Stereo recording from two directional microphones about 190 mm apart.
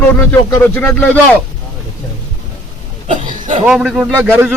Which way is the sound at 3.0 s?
40° right (ahead or behind).